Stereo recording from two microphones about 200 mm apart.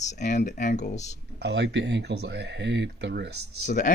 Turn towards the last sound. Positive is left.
turn(degrees=40)  # may be behind; listen again after turning